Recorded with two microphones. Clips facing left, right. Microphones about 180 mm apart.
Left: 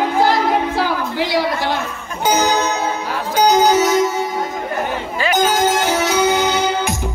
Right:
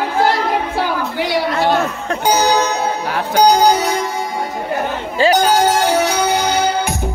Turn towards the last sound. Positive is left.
turn(degrees=-35)  # may be behind; listen again after turning